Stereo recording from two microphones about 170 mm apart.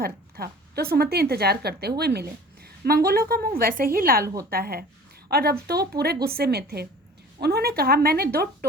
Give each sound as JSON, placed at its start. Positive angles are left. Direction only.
{"t": 0.0, "sound": "a woman's voice", "side_deg": -65}